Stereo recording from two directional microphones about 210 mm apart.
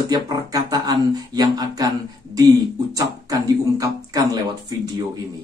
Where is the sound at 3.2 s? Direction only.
15° right (ahead or behind).